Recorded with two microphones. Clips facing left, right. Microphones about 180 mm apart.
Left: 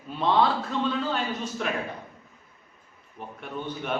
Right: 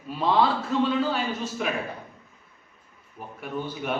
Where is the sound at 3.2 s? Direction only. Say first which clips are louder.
Even; 5° right (ahead or behind).